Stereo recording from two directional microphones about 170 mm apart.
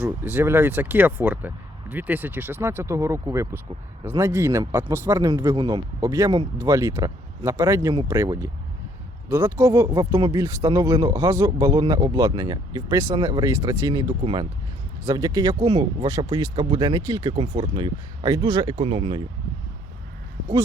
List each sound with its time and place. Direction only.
0.0 s speech: 10° right (ahead or behind)
17.3 s speech: 35° right (ahead or behind)